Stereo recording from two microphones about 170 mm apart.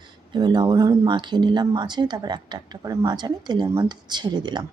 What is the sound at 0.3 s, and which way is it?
Speech, 25° right (ahead or behind).